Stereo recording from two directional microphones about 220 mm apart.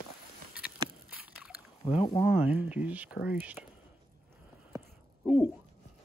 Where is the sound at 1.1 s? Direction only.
5° right (ahead or behind).